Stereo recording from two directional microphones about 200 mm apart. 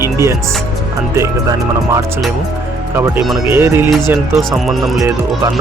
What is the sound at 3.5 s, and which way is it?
Speech, 10° right (ahead or behind).